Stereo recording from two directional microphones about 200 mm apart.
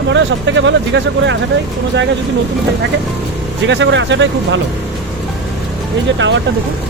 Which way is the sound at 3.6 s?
65° right (ahead or behind).